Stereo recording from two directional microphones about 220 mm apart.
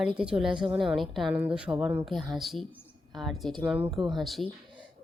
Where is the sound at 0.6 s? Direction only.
20° right (ahead or behind).